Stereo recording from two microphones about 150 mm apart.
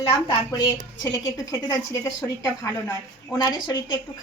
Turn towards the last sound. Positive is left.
turn(degrees=30)  # may be behind; listen again after turning